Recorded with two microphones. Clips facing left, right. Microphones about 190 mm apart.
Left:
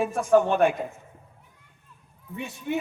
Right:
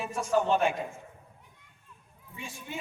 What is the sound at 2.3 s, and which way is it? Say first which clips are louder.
Speech: left 11 dB; 65° left (ahead or behind).